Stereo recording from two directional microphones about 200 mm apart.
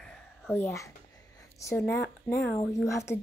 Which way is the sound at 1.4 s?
15° left (ahead or behind).